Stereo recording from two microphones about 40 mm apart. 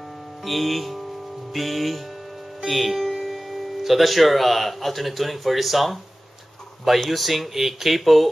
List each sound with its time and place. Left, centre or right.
0.5 s speech: centre
7.1 s speech: centre